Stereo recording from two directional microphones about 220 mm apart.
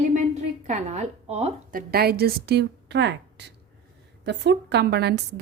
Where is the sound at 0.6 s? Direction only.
30° right (ahead or behind).